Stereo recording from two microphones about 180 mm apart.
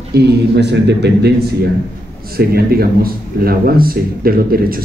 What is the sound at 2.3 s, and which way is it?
Speech, 55° right (ahead or behind).